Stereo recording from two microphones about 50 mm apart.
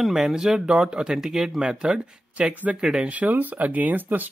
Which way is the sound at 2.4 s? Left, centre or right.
Right.